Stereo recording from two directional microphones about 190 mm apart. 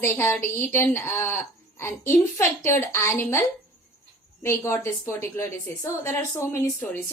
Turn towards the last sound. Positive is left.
turn(degrees=10)  # may be behind; listen again after turning